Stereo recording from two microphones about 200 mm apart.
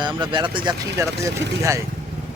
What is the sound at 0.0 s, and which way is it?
Speech, 25° right (ahead or behind).